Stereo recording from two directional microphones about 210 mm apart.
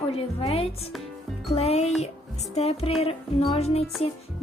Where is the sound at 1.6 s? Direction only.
30° left (ahead or behind).